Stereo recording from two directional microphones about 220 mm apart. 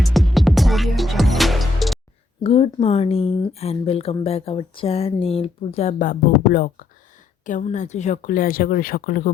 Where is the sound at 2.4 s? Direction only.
25° left (ahead or behind).